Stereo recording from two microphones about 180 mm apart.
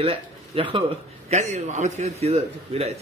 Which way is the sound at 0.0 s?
30° right (ahead or behind).